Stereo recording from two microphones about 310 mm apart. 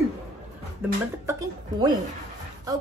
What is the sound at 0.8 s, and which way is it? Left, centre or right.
Child singing, centre.